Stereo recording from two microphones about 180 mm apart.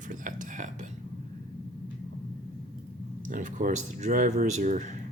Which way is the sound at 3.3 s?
45° right (ahead or behind).